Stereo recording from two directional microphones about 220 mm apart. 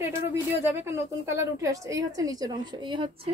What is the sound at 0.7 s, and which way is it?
A woman's voice, 10° right (ahead or behind).